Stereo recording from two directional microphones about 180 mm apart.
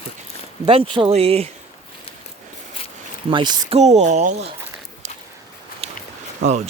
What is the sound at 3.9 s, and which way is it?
Speech, 40° right (ahead or behind).